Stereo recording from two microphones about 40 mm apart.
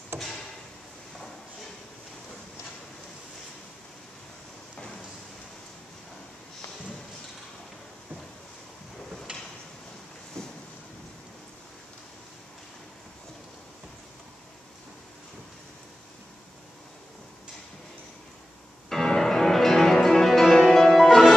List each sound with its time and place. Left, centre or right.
9.3 s a sound: right
10.4 s boat: centre
18.9 s music: centre